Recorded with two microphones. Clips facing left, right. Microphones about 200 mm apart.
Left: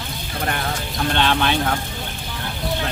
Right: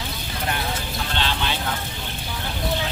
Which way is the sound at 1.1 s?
60° left (ahead or behind).